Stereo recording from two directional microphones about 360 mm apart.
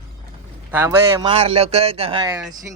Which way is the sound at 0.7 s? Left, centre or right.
Centre.